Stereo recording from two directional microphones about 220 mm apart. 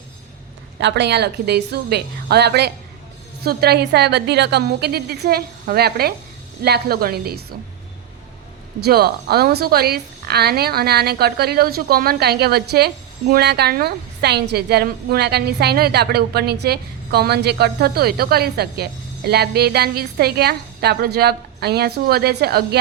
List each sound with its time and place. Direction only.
0.8 s a woman's voice: 50° right (ahead or behind)
8.8 s a woman's voice: 45° right (ahead or behind)